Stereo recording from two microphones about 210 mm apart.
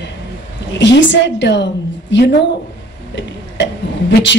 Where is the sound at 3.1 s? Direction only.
55° left (ahead or behind).